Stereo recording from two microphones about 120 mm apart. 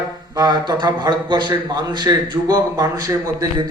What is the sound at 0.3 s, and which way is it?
A man's voice, 35° right (ahead or behind).